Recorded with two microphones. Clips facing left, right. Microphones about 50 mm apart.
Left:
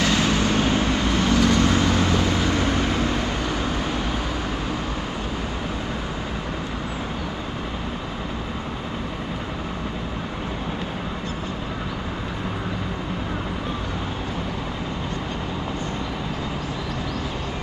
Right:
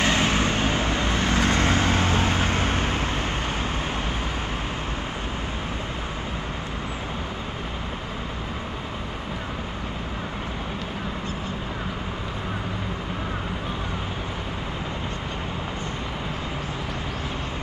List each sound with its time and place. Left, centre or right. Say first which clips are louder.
0.0 s vehicle: left 1 dB; right